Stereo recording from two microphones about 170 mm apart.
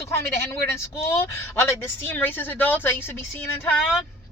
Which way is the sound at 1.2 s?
15° left (ahead or behind).